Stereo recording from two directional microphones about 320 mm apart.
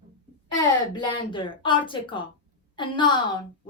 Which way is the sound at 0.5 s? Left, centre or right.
Centre.